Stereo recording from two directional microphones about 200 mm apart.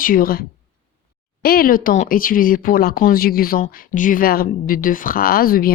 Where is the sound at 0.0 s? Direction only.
45° left (ahead or behind).